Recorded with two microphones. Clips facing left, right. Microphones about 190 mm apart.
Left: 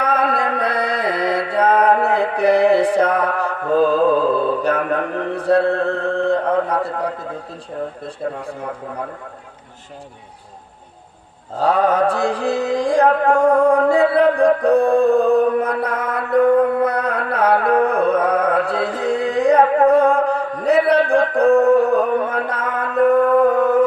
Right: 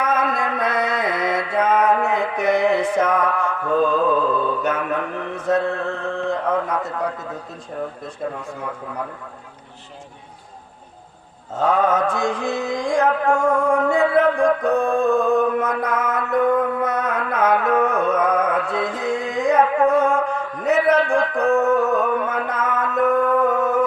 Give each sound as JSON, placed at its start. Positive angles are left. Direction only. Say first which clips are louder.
{"t": 0.0, "sound": "music", "louder": "left 2 dB", "side_deg": 35}
{"t": 8.0, "sound": "a man's voice", "louder": "left 3 dB", "side_deg": 30}
{"t": 11.5, "sound": "mantra", "louder": "left 2 dB", "side_deg": 35}